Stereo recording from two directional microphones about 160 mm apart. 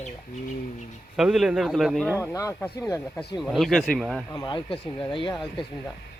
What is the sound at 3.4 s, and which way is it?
Speech, centre (ahead or behind).